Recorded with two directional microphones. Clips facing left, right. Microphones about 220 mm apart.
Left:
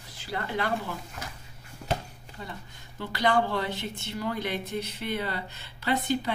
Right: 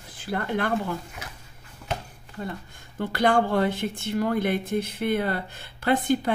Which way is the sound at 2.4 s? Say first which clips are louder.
Right 7 dB; 50° right (ahead or behind).